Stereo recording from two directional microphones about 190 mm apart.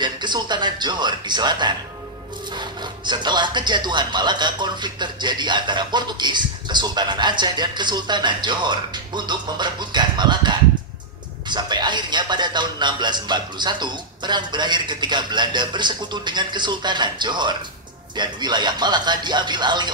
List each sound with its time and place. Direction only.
0.0 s speech: 25° right (ahead or behind)